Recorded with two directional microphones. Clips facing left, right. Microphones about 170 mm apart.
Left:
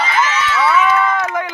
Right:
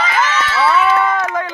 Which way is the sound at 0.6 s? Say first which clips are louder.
Right 1 dB; 30° right (ahead or behind).